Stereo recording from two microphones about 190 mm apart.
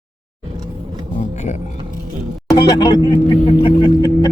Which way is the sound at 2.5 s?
20° left (ahead or behind).